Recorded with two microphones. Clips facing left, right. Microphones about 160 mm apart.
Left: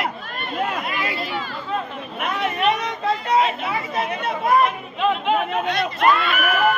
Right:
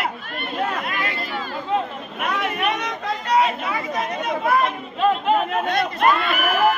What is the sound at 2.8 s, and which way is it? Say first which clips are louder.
Speech: left 3 dB; 25° left (ahead or behind).